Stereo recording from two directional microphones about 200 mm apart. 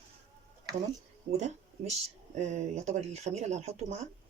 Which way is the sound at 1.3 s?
35° right (ahead or behind).